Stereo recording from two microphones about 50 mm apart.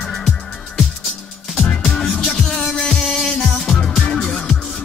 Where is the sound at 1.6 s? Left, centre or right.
Left.